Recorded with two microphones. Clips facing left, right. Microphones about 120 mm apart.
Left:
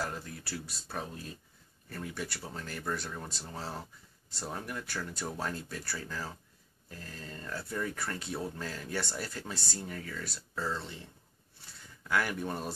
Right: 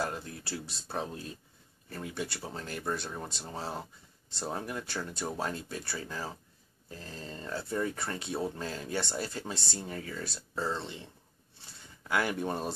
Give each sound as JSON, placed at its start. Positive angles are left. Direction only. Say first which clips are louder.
{"t": 0.0, "sound": "speech", "louder": "right 3 dB", "side_deg": -25}